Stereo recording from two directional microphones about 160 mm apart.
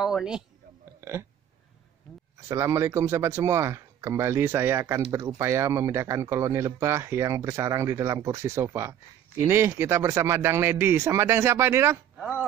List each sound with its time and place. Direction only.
0.0 s speech: 5° right (ahead or behind)
1.0 s a sound: 15° right (ahead or behind)
2.4 s speech: 15° right (ahead or behind)